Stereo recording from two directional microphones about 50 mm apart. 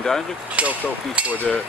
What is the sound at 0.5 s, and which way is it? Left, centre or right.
Speech, right.